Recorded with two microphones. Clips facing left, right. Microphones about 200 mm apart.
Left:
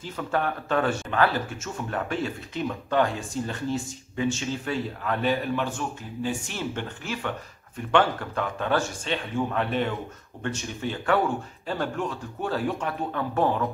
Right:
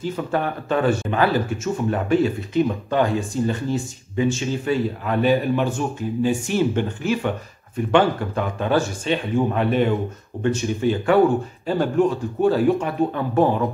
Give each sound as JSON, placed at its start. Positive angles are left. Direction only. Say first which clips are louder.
{"t": 0.0, "sound": "speech", "louder": "right 4 dB", "side_deg": -5}